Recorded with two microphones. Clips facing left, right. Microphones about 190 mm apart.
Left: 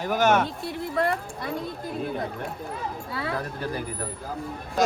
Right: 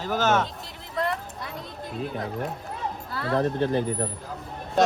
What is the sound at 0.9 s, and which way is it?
Speech, 55° left (ahead or behind).